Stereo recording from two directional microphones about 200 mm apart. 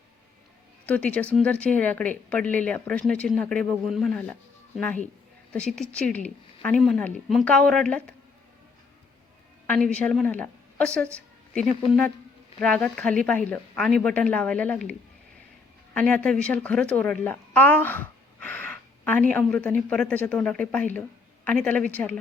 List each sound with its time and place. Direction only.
0.9 s speech: 5° left (ahead or behind)
9.6 s a woman's voice: 5° left (ahead or behind)
16.0 s a woman's voice: 5° left (ahead or behind)